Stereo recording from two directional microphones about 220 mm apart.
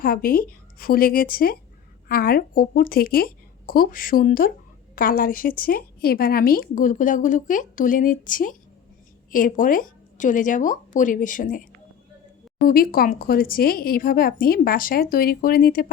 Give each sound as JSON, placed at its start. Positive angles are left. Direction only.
{"t": 0.0, "sound": "speech", "side_deg": 40}